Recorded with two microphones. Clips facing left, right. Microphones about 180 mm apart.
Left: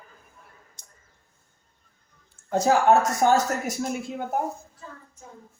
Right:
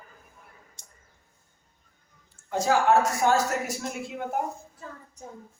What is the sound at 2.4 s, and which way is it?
Speech, 45° left (ahead or behind).